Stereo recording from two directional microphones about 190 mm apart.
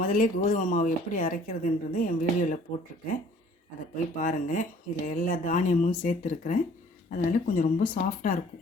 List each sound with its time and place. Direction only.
0.0 s speech: 45° left (ahead or behind)
3.9 s speech: 45° left (ahead or behind)